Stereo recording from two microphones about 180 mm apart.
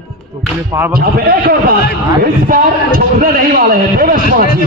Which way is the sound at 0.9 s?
55° right (ahead or behind).